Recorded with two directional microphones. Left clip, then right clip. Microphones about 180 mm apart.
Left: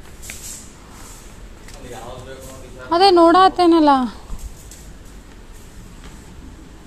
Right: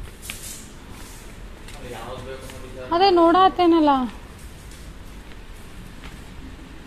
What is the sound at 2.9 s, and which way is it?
Speech, 25° left (ahead or behind).